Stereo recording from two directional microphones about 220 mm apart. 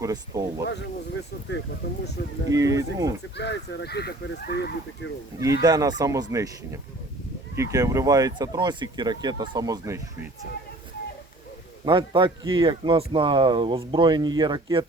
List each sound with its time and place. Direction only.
0.0 s speech: 15° right (ahead or behind)
0.7 s speech: 55° left (ahead or behind)
2.5 s speech: 15° right (ahead or behind)
3.3 s speech: 50° left (ahead or behind)
5.4 s speech: 15° right (ahead or behind)
11.9 s speech: 20° right (ahead or behind)